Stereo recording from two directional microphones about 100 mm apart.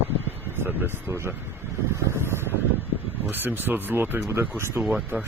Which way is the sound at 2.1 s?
25° right (ahead or behind).